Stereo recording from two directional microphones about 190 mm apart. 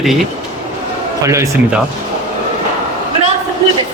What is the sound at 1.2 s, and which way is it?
Speech, 15° right (ahead or behind).